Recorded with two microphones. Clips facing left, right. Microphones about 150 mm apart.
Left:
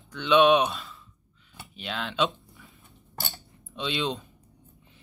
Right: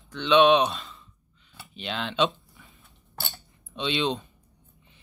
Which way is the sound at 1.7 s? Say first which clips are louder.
Right 2 dB; centre (ahead or behind).